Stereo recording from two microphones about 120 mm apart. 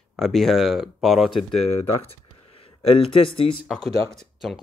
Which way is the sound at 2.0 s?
55° left (ahead or behind).